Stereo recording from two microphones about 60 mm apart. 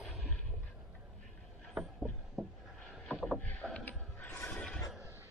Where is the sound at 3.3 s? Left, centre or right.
Centre.